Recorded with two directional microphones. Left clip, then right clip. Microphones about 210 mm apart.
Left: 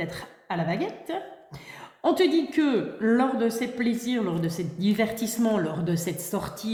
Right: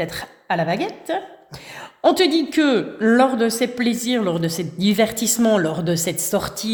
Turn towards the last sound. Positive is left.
turn(degrees=-50)  # may be behind; listen again after turning